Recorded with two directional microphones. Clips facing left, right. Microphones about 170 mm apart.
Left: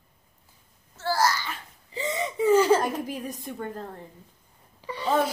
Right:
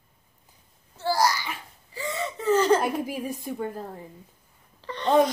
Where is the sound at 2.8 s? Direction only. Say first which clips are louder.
Right 2 dB; 10° right (ahead or behind).